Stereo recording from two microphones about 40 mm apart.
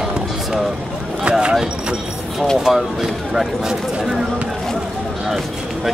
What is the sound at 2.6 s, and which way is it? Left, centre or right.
Speech, centre.